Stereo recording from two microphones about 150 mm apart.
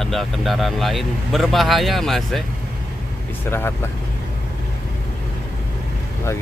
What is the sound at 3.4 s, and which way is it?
Speech, 15° left (ahead or behind).